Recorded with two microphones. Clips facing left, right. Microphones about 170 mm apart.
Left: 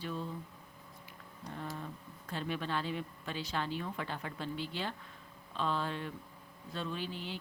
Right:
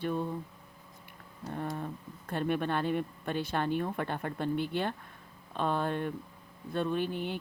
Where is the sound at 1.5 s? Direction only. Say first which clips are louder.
Right 6 dB; 55° right (ahead or behind).